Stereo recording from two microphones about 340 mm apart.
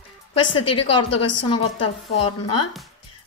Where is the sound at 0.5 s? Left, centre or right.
Left.